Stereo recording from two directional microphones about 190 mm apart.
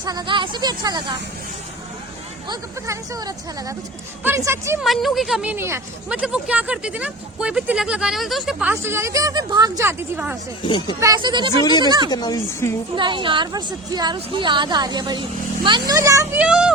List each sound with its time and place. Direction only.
0.0 s a woman's voice: 20° right (ahead or behind)
2.5 s a woman's voice: 15° right (ahead or behind)
4.8 s a woman's voice: centre (ahead or behind)
11.0 s a woman's voice: 20° right (ahead or behind)
11.6 s speech: 20° left (ahead or behind)
11.9 s a woman's voice: 20° right (ahead or behind)
12.1 s speech: 20° left (ahead or behind)
13.0 s a woman's voice: 25° right (ahead or behind); by 16.7 s 5° right (ahead or behind)